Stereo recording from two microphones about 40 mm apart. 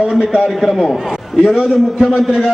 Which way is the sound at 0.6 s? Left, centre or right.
Centre.